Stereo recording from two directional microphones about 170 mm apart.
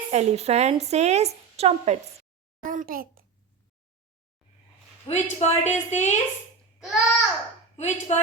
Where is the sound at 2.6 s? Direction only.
50° right (ahead or behind).